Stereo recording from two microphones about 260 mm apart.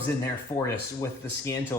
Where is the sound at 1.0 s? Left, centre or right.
Centre.